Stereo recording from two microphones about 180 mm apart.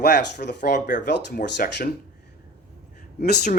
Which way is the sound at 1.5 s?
55° left (ahead or behind).